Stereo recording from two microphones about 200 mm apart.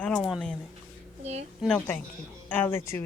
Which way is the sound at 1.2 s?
35° right (ahead or behind).